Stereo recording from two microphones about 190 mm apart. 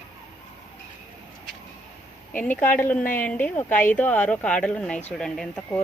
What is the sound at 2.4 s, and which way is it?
Speech, 10° left (ahead or behind).